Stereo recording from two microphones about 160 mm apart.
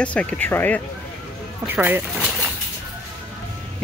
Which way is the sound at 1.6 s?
10° right (ahead or behind).